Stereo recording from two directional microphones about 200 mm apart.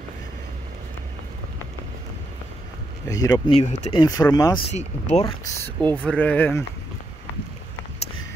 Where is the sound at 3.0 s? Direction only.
15° left (ahead or behind).